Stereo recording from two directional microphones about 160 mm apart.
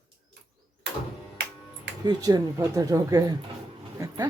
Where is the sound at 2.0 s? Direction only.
25° right (ahead or behind).